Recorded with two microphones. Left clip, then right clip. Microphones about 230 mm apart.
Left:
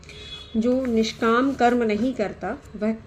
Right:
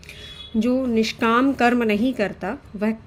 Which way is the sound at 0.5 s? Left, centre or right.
Right.